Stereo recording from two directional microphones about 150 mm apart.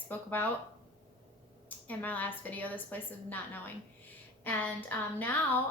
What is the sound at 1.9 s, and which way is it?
A woman's voice, 10° left (ahead or behind).